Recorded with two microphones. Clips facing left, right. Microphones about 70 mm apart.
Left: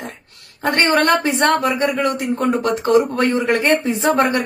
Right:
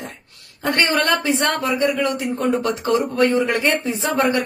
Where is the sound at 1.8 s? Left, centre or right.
Left.